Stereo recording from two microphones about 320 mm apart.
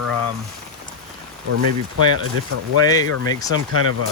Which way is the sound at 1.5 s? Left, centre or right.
Right.